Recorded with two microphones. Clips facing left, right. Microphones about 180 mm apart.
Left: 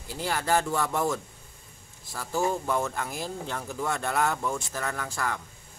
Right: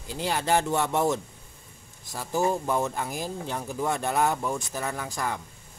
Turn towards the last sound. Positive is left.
turn(degrees=-15)  # may be behind; listen again after turning